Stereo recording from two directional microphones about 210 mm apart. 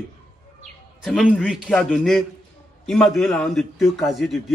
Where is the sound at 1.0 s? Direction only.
Centre (ahead or behind).